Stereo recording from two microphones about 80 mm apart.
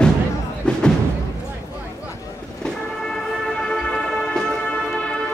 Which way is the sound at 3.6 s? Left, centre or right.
Centre.